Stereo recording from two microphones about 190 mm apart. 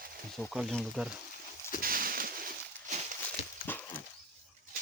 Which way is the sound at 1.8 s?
50° right (ahead or behind).